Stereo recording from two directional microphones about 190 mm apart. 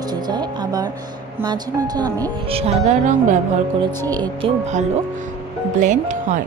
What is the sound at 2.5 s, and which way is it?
Speech, 35° right (ahead or behind).